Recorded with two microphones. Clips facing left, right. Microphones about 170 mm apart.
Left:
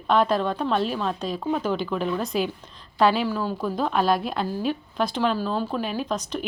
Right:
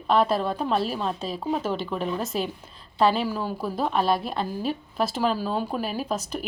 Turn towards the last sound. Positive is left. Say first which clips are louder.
# left 1 dB
turn(degrees=-5)  # may be behind; listen again after turning